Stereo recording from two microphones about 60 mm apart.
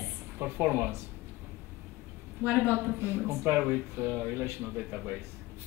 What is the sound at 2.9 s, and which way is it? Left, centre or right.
Speech, right.